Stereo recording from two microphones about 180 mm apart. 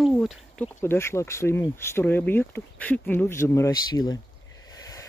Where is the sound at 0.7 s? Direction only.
15° left (ahead or behind).